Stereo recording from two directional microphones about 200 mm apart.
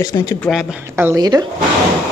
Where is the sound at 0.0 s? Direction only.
20° left (ahead or behind).